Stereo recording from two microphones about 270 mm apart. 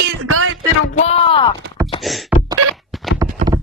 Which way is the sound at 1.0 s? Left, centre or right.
Left.